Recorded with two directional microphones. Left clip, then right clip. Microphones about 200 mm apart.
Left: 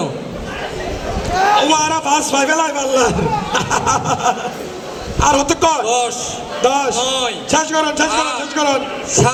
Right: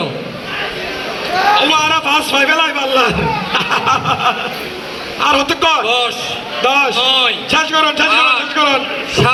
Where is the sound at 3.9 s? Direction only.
65° left (ahead or behind).